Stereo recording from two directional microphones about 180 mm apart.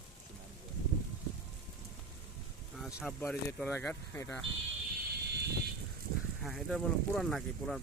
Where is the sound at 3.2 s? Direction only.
10° left (ahead or behind).